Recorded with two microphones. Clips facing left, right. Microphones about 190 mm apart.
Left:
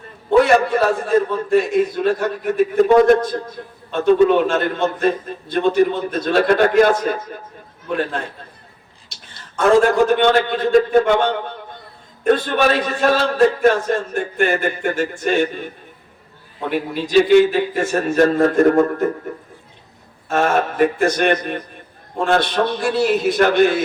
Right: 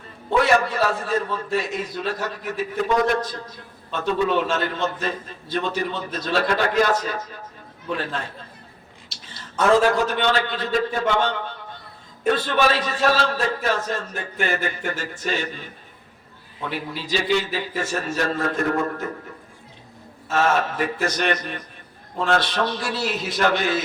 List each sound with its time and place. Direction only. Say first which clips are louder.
0.4 s a man's voice: left 5 dB; 55° left (ahead or behind)
10.1 s a man's voice: left 7 dB; 50° left (ahead or behind)
20.2 s a man's voice: left 3 dB; 55° left (ahead or behind)